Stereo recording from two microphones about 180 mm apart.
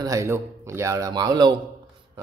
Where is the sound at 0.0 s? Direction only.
15° right (ahead or behind).